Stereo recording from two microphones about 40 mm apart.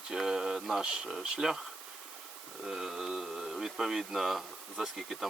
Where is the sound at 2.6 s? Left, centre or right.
Centre.